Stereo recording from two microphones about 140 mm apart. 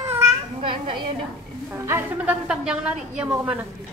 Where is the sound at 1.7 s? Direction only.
20° right (ahead or behind).